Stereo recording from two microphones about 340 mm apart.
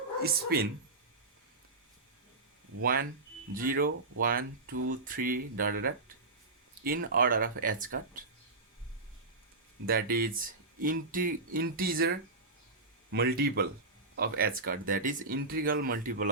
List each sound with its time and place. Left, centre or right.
0.2 s speech: right
2.8 s speech: right
9.8 s speech: right